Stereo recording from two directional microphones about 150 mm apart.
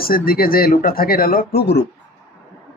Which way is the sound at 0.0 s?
80° left.